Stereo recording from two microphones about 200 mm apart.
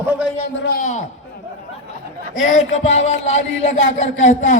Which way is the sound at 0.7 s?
40° left (ahead or behind).